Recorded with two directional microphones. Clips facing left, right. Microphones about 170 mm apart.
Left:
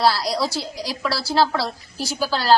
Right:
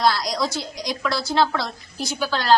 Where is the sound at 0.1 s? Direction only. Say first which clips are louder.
Left 1 dB; 35° left (ahead or behind).